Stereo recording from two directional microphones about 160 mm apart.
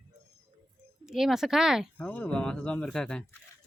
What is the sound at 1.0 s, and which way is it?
Speech, 5° right (ahead or behind).